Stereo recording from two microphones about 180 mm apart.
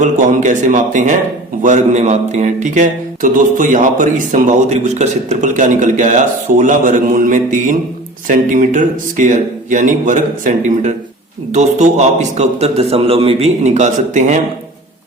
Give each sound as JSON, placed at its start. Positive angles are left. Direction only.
{"t": 0.0, "sound": "a man's voice", "side_deg": -45}